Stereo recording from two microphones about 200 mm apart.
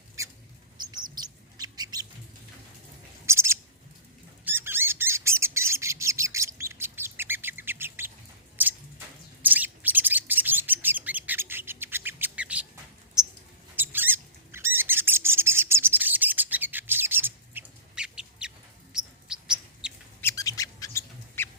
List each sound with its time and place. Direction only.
1.2 s bird: 20° right (ahead or behind)
3.2 s bird: 15° right (ahead or behind)
9.4 s bird: 10° right (ahead or behind)
13.7 s bird: 10° right (ahead or behind)
18.9 s chirp: 5° right (ahead or behind)
20.2 s bird: 15° left (ahead or behind)